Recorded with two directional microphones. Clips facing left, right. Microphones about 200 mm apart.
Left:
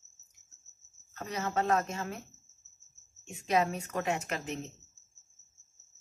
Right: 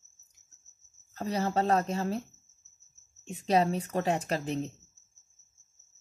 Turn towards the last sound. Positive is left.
turn(degrees=-35)  # may be behind; listen again after turning